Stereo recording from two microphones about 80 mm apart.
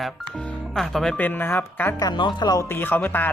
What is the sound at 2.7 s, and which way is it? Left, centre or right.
Speech, left.